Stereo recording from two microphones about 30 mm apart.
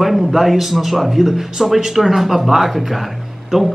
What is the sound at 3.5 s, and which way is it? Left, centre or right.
Speech, centre.